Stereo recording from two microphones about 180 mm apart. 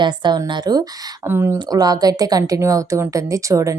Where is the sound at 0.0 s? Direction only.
25° right (ahead or behind).